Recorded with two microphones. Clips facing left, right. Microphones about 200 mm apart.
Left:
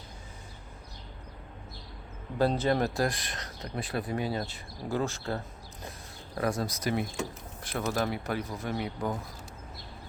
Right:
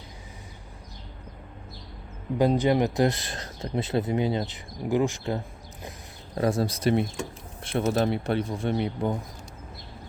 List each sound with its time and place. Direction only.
2.4 s speech: 15° right (ahead or behind)
6.3 s speech: 25° right (ahead or behind)